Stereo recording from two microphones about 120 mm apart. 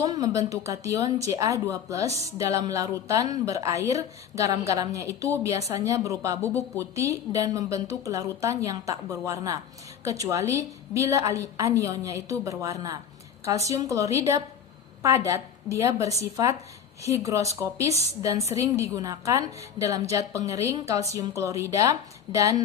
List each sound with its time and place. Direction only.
0.0 s a woman's voice: 30° right (ahead or behind)
17.2 s a woman's voice: 25° right (ahead or behind)